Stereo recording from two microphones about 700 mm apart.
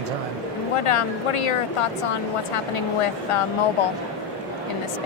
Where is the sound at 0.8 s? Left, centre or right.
Left.